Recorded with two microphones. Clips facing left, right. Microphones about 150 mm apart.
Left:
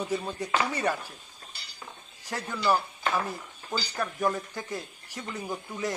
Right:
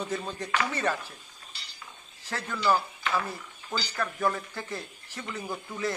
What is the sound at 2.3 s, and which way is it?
Speech, 15° left (ahead or behind).